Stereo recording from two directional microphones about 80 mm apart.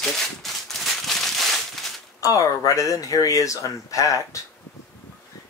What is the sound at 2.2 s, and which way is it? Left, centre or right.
Speech, left.